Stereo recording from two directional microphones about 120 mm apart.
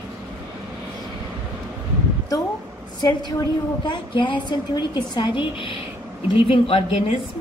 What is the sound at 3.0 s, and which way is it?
A woman's voice, 35° left (ahead or behind).